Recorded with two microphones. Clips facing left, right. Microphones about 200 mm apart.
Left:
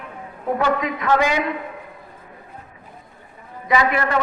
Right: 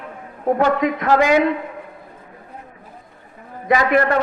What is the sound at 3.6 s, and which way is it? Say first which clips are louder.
Speech: right 4 dB; 50° right (ahead or behind).